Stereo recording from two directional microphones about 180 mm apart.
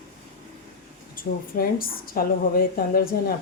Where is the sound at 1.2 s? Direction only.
55° left (ahead or behind).